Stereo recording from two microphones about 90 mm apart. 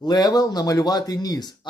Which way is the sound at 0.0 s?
50° left (ahead or behind).